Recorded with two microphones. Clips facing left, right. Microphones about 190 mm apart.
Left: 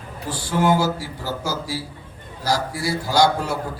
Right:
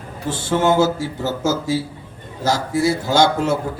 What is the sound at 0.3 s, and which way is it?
A man's voice, 25° right (ahead or behind).